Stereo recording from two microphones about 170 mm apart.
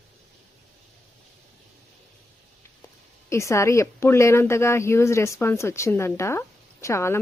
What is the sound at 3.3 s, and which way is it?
Speech, 15° left (ahead or behind).